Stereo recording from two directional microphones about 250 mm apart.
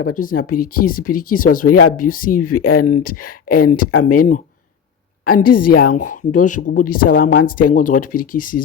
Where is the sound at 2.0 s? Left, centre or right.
Left.